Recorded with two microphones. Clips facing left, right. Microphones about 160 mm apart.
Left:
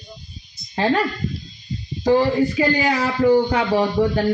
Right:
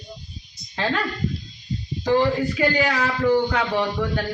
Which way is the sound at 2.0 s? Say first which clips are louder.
Left 3 dB; 35° left (ahead or behind).